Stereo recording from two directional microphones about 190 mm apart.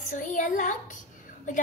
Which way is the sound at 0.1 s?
40° left (ahead or behind).